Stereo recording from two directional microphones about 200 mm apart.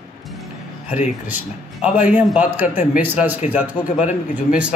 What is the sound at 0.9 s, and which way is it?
Speech, 10° right (ahead or behind).